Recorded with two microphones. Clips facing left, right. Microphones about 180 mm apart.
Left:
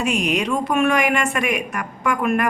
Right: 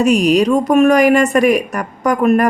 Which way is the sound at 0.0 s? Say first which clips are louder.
Right 9 dB; 40° right (ahead or behind).